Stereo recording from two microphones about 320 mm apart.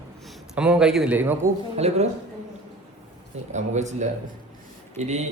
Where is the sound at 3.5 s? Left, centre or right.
Right.